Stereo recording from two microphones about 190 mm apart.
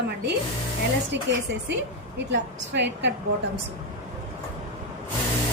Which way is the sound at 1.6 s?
70° right (ahead or behind).